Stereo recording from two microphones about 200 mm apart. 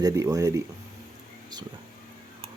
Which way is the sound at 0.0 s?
15° right (ahead or behind).